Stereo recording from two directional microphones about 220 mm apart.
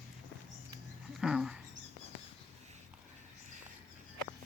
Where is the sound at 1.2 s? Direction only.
5° right (ahead or behind).